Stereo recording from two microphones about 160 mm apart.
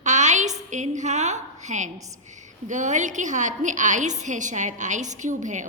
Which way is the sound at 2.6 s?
50° right (ahead or behind).